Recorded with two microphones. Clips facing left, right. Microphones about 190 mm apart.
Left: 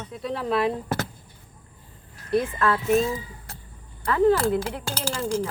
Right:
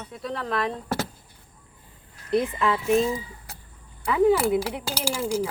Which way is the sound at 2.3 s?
15° right (ahead or behind).